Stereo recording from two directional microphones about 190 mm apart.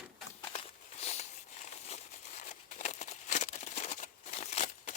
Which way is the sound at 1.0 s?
35° left (ahead or behind).